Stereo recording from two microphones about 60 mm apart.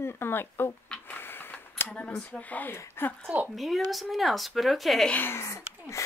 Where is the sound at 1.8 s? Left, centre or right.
Centre.